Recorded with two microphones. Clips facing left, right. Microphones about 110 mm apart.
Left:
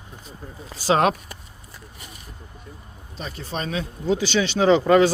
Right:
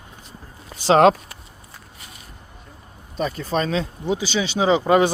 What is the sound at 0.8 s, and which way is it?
Speech, 30° right (ahead or behind).